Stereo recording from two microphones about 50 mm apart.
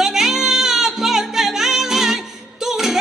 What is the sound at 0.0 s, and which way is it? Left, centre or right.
Music, centre.